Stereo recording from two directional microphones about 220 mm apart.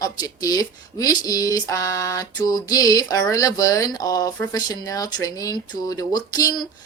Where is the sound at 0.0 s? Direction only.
15° left (ahead or behind).